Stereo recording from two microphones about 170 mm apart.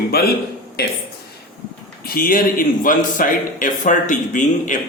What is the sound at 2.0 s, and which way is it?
A man's voice, 60° left (ahead or behind).